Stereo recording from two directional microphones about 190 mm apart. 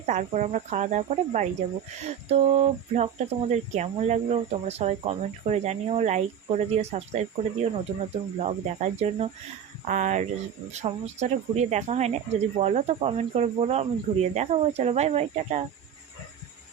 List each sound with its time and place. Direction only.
0.0 s speech: 40° right (ahead or behind)